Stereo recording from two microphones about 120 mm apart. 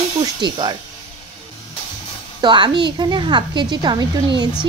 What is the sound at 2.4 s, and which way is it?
Speech, 40° right (ahead or behind).